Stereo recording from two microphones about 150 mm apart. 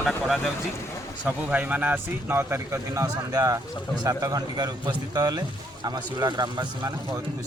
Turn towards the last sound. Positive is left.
turn(degrees=-30)  # may be behind; listen again after turning